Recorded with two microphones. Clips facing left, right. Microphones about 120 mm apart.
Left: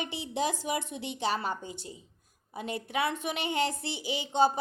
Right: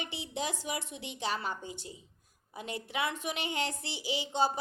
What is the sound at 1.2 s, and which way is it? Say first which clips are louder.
Speech: left 4 dB; 30° left (ahead or behind).